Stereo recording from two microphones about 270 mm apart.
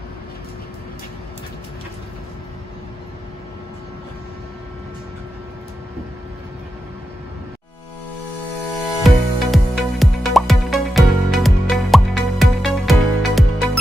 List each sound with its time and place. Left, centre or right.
9.0 s music: centre